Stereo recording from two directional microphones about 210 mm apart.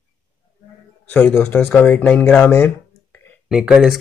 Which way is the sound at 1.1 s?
10° left (ahead or behind).